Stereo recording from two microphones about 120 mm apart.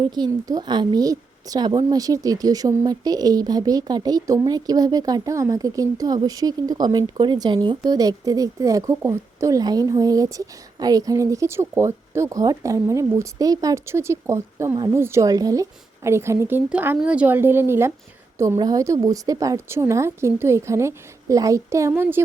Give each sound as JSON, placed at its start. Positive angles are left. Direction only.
{"t": 0.1, "sound": "a woman's voice", "side_deg": -35}